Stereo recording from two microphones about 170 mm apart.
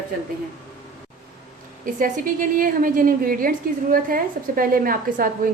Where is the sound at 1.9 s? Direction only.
50° right (ahead or behind).